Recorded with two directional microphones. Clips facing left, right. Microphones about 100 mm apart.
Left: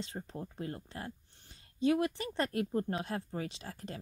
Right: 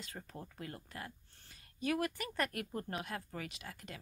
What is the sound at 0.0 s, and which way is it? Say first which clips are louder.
Speech: left 7 dB; 25° left (ahead or behind).